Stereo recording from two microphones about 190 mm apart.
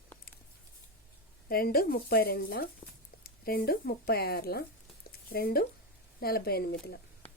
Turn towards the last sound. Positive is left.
turn(degrees=55)  # may be behind; listen again after turning